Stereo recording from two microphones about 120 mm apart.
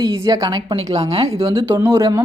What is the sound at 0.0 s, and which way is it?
Speech, 30° right (ahead or behind).